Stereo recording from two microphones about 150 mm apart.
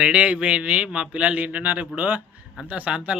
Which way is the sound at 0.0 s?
5° right (ahead or behind).